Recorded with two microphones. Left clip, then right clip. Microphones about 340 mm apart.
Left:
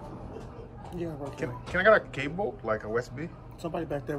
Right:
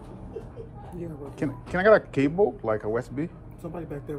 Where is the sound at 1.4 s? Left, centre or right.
Centre.